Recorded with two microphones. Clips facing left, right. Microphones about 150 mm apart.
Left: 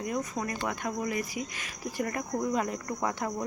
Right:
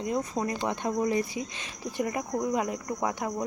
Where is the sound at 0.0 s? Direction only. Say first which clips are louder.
Right 3 dB; 25° right (ahead or behind).